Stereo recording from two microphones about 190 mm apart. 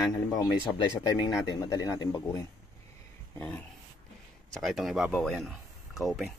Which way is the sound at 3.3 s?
5° left (ahead or behind).